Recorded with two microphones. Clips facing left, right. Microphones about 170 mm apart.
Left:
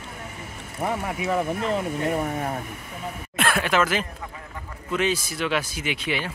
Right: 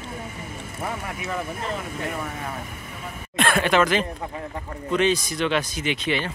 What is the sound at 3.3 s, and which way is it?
Speech, 5° left (ahead or behind).